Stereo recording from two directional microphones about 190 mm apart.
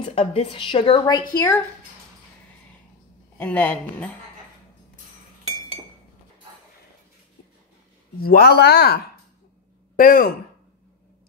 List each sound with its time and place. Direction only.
0.0 s a woman's voice: 30° left (ahead or behind)
3.3 s speech: 10° left (ahead or behind)
8.2 s speech: 55° left (ahead or behind)